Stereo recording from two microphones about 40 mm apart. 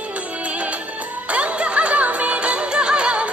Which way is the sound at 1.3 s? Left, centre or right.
Right.